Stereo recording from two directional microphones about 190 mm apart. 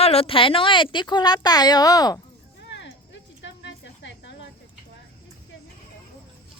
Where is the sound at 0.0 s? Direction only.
30° left (ahead or behind).